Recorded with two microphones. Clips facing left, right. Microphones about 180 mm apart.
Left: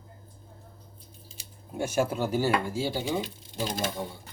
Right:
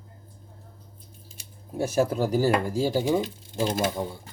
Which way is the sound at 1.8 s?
35° right (ahead or behind).